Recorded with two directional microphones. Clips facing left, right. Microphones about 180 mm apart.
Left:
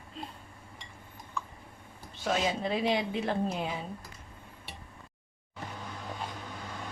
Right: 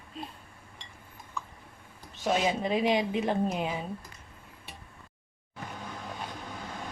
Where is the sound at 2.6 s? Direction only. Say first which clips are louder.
Right 3 dB; 15° right (ahead or behind).